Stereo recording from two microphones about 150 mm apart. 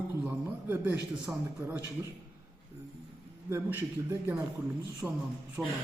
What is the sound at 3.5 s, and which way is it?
Speech, 15° right (ahead or behind).